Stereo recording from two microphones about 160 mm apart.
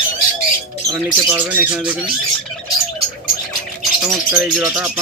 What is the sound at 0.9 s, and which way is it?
Speech, 15° right (ahead or behind).